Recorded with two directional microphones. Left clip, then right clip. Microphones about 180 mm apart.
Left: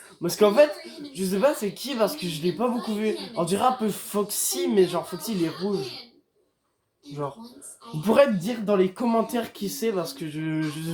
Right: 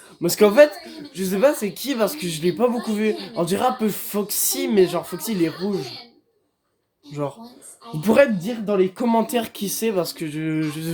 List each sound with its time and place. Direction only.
0.2 s a woman's voice: 35° right (ahead or behind)
8.0 s speech: 30° right (ahead or behind)
9.0 s a woman's voice: 40° right (ahead or behind)